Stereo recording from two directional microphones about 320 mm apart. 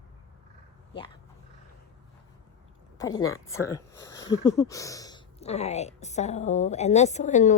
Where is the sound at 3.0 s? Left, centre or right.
Centre.